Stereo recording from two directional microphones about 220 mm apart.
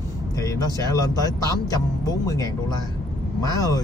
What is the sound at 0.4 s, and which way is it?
Speech, 15° left (ahead or behind).